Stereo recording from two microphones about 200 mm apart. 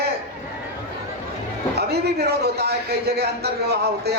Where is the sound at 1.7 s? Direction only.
55° right (ahead or behind).